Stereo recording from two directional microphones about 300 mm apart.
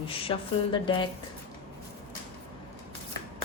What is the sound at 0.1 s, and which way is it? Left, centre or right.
Speech, centre.